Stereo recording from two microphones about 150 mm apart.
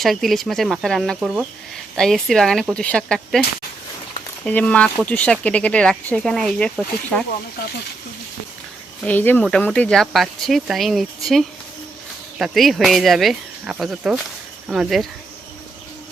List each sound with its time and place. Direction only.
0.0 s speech: centre (ahead or behind)
4.4 s speech: 10° left (ahead or behind)
9.0 s speech: 10° left (ahead or behind)